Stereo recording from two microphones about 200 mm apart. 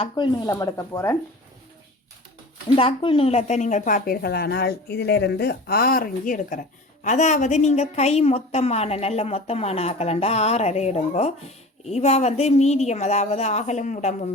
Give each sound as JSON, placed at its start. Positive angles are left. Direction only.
{"t": 0.0, "sound": "speech", "side_deg": 20}
{"t": 2.6, "sound": "a woman's voice", "side_deg": 25}